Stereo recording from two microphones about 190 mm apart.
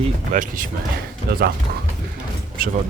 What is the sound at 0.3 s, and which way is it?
Speech, 45° right (ahead or behind).